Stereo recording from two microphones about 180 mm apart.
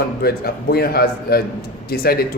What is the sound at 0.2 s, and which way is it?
A man's voice, 60° left (ahead or behind).